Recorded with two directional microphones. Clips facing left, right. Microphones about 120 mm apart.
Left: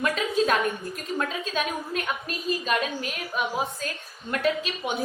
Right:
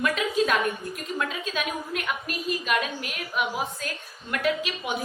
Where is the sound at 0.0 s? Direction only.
35° left (ahead or behind).